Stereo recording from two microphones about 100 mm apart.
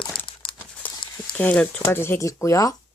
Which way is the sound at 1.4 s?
15° left (ahead or behind).